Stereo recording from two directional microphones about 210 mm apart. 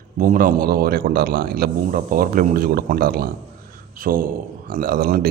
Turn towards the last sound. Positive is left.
turn(degrees=-45)  # may be behind; listen again after turning